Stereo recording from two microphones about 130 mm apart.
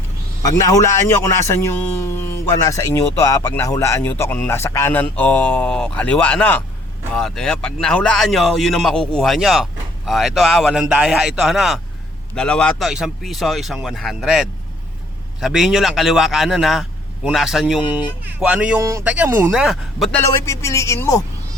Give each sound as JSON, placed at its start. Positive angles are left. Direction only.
{"t": 0.4, "sound": "a man's voice", "side_deg": 25}
{"t": 18.8, "sound": "speech", "side_deg": -25}
{"t": 19.0, "sound": "a man's voice", "side_deg": -10}
{"t": 20.1, "sound": "a man's voice", "side_deg": 15}